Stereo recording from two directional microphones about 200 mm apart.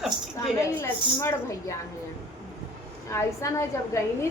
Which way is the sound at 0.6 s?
15° left (ahead or behind).